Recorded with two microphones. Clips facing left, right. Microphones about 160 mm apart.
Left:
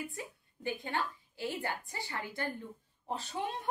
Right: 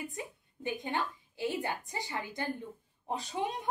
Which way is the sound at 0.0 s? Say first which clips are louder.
Right 1 dB; 20° right (ahead or behind).